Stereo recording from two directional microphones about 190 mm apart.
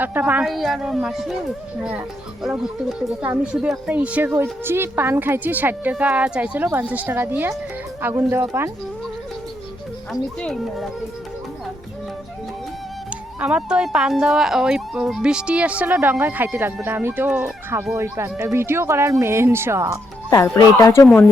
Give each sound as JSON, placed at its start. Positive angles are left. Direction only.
{"t": 0.0, "sound": "speech", "side_deg": -10}
{"t": 10.1, "sound": "speech", "side_deg": 0}
{"t": 13.4, "sound": "speech", "side_deg": -5}
{"t": 20.6, "sound": "speech", "side_deg": 15}